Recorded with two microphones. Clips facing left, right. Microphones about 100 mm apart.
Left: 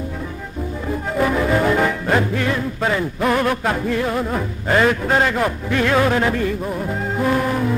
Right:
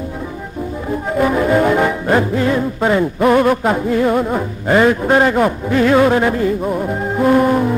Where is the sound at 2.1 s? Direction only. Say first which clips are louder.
Right 6 dB; 25° right (ahead or behind).